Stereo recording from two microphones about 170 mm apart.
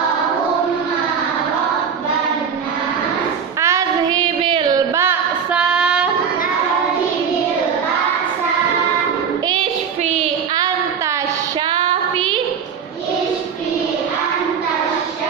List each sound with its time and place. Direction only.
3.6 s child singing: 20° right (ahead or behind)
4.9 s female singing: 10° right (ahead or behind)
11.7 s child singing: 30° right (ahead or behind)